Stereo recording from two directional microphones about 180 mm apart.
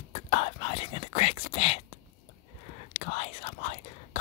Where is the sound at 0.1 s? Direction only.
30° left (ahead or behind).